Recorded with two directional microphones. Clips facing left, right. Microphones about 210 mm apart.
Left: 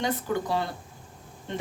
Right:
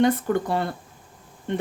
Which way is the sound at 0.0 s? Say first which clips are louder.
Right 7 dB; 55° right (ahead or behind).